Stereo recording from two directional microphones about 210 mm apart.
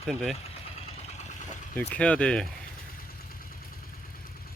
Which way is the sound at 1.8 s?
5° left (ahead or behind).